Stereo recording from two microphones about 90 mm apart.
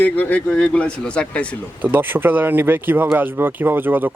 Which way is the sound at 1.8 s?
20° right (ahead or behind).